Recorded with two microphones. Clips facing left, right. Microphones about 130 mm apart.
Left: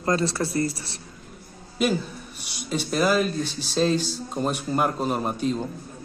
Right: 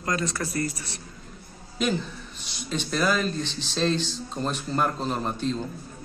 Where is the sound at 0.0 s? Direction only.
30° left (ahead or behind).